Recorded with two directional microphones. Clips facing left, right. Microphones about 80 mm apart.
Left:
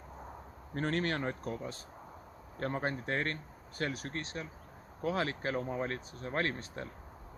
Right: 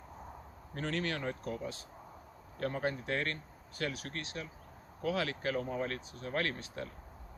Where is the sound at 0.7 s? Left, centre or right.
Left.